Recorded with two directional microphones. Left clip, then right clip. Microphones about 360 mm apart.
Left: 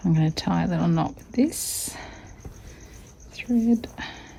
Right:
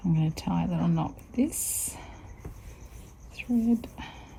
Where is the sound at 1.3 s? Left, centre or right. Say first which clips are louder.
Left 5 dB; left.